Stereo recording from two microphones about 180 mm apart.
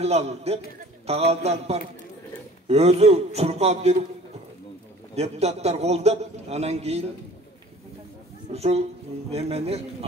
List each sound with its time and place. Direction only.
0.0 s a man's voice: 35° right (ahead or behind)
5.1 s a man's voice: 35° right (ahead or behind)
8.5 s a man's voice: 35° right (ahead or behind)